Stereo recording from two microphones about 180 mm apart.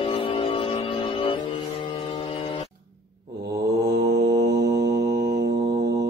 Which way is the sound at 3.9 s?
65° right (ahead or behind).